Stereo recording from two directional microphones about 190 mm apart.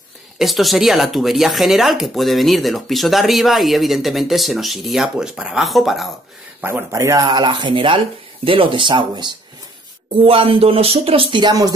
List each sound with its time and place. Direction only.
0.4 s speech: centre (ahead or behind)
6.6 s speech: 15° right (ahead or behind)